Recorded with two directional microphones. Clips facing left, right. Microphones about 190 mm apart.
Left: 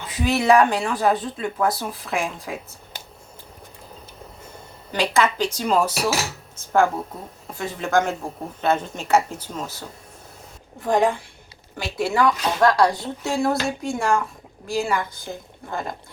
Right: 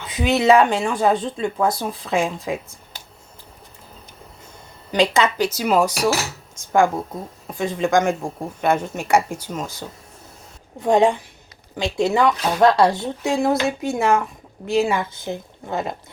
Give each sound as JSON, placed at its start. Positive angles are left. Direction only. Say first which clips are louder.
{"t": 0.1, "sound": "speech", "louder": "right 2 dB", "side_deg": -20}
{"t": 4.9, "sound": "speech", "louder": "right 3 dB", "side_deg": -20}
{"t": 5.4, "sound": "speech", "louder": "right 3 dB", "side_deg": -5}
{"t": 7.6, "sound": "speech", "louder": "right 3 dB", "side_deg": -15}
{"t": 10.8, "sound": "speech", "louder": "right 4 dB", "side_deg": -20}